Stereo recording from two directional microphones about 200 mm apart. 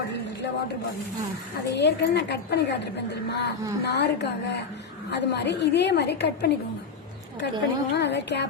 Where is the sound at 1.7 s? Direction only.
55° left (ahead or behind).